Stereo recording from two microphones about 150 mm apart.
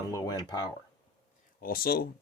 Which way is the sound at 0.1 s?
25° left (ahead or behind).